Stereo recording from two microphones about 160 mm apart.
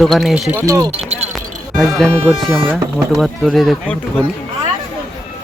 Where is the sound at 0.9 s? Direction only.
40° right (ahead or behind).